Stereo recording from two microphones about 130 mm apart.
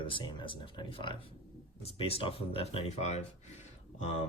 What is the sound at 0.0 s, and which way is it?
Speech, 40° left (ahead or behind).